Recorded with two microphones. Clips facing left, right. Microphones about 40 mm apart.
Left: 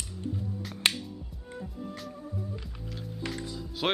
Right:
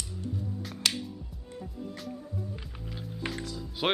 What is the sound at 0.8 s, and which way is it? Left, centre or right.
Music, left.